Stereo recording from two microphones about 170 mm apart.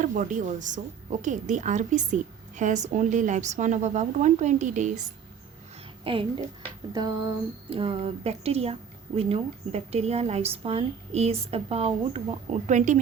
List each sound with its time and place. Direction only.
0.0 s a woman's voice: 50° right (ahead or behind)
6.1 s a woman's voice: 30° right (ahead or behind)
7.7 s a woman's voice: 35° right (ahead or behind)